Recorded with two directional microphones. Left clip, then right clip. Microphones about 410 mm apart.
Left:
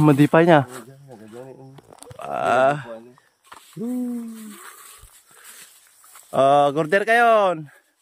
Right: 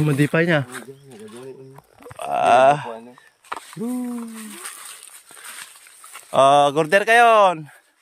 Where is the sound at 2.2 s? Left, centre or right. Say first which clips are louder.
Right 4 dB; centre.